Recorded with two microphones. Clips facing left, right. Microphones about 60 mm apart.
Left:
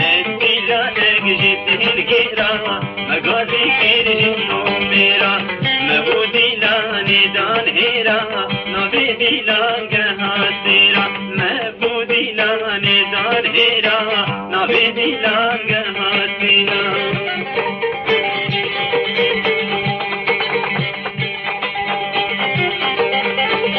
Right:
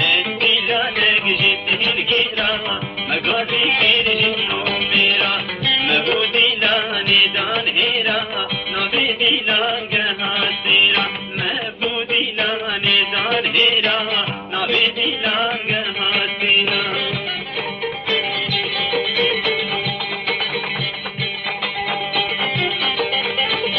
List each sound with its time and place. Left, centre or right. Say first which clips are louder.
0.4 s music: left 3 dB; centre
1.4 s music: left 3 dB; left
6.0 s music: left 3 dB; centre
7.1 s music: left 2 dB; left
9.9 s music: left 3 dB; left
10.4 s music: left 2 dB; left
12.1 s music: left 4 dB; left
12.8 s music: left 2 dB; left
22.6 s music: left 4 dB; left